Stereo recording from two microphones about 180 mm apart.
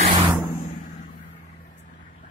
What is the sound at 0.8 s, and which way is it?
Vehicle, 40° left (ahead or behind).